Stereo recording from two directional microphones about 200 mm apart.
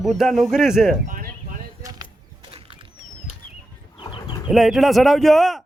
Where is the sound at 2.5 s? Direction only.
25° right (ahead or behind).